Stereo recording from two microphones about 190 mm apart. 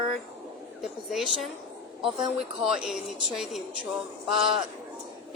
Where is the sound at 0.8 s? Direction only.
Centre (ahead or behind).